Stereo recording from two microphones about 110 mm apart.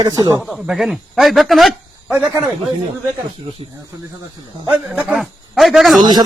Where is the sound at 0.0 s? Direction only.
35° right (ahead or behind).